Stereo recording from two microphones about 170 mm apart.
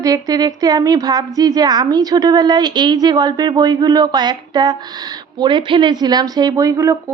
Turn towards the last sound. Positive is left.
turn(degrees=-15)  # may be behind; listen again after turning